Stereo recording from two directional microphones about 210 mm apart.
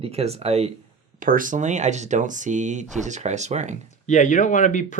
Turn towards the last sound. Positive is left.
turn(degrees=35)  # may be behind; listen again after turning